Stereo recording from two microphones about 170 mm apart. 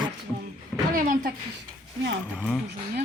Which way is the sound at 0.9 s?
55° right (ahead or behind).